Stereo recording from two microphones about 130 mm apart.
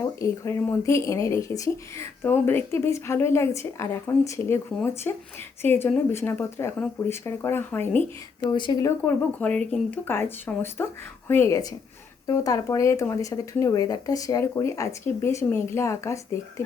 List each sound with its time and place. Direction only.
0.0 s speech: 25° left (ahead or behind)
8.4 s speech: 35° left (ahead or behind)
9.0 s speech: 10° left (ahead or behind)